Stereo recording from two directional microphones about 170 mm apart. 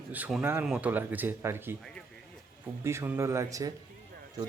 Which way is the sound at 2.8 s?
15° right (ahead or behind).